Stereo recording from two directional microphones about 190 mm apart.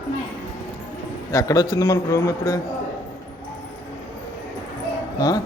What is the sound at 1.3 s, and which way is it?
A man's voice, 15° left (ahead or behind).